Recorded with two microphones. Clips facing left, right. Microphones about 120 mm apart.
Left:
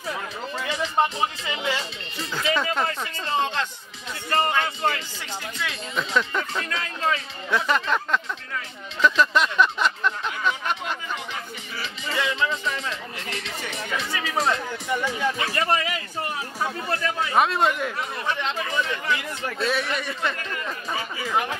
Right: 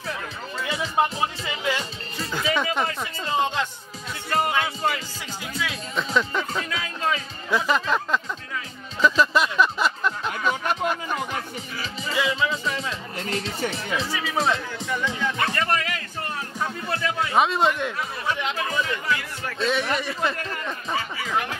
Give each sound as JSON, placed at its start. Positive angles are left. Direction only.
{"t": 0.6, "sound": "speech", "side_deg": -5}
{"t": 9.0, "sound": "music", "side_deg": -5}
{"t": 10.5, "sound": "music", "side_deg": -40}
{"t": 11.8, "sound": "music", "side_deg": -5}
{"t": 13.2, "sound": "speech", "side_deg": -35}
{"t": 14.1, "sound": "speech", "side_deg": 0}
{"t": 15.5, "sound": "speech", "side_deg": 15}
{"t": 21.3, "sound": "speech", "side_deg": 15}